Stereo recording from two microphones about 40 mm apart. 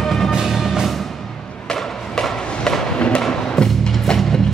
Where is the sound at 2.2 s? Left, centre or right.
Centre.